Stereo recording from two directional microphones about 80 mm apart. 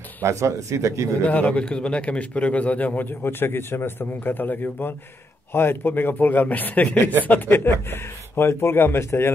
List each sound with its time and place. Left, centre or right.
0.2 s speech: right
1.2 s speech: centre